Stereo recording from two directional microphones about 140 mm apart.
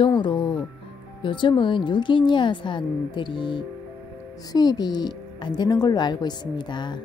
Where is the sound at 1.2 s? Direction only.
35° left (ahead or behind).